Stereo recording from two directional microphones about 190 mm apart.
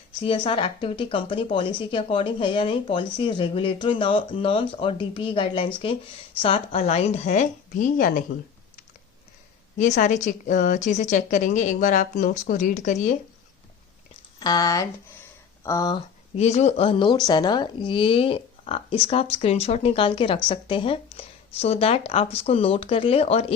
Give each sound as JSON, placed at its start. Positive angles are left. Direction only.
{"t": 0.2, "sound": "speech", "side_deg": 25}
{"t": 9.7, "sound": "speech", "side_deg": 40}
{"t": 14.3, "sound": "speech", "side_deg": 20}